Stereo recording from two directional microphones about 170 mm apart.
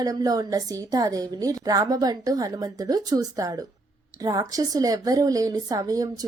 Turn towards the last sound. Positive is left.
turn(degrees=-20)  # may be behind; listen again after turning